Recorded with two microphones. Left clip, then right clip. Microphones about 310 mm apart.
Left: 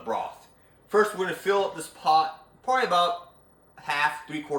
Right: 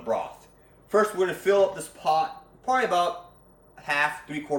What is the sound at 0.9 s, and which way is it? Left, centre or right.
Speech, centre.